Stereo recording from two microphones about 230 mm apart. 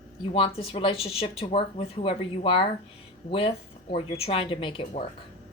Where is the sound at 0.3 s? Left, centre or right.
Left.